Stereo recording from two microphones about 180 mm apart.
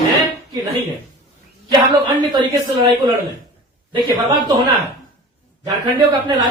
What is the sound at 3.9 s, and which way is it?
A man's voice, 25° right (ahead or behind).